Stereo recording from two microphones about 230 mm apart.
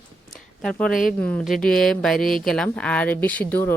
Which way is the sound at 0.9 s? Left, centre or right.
Left.